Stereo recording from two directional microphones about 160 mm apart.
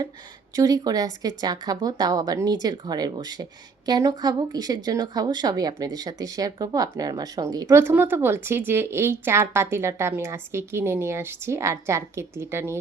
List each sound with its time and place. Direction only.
0.5 s speech: 25° right (ahead or behind)